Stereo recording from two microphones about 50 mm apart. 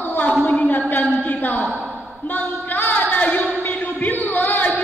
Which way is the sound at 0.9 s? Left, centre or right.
Left.